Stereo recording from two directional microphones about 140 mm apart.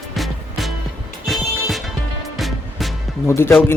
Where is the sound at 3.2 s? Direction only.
15° left (ahead or behind).